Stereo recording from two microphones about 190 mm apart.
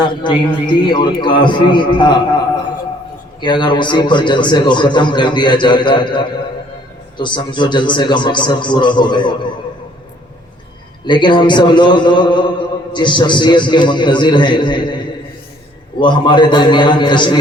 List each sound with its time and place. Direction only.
0.0 s a man's voice: 25° left (ahead or behind)
3.4 s a man's voice: 25° left (ahead or behind)
11.0 s a man's voice: 25° left (ahead or behind)
16.0 s a man's voice: 25° left (ahead or behind)